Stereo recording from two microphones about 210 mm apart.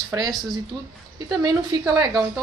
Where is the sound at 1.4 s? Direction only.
20° right (ahead or behind).